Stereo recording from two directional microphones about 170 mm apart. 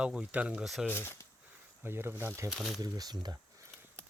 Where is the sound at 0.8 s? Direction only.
15° left (ahead or behind).